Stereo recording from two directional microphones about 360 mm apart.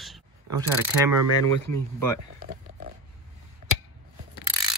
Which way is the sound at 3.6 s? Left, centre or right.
Right.